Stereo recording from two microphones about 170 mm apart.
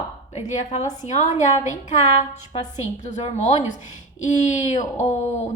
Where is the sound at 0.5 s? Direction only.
40° left (ahead or behind).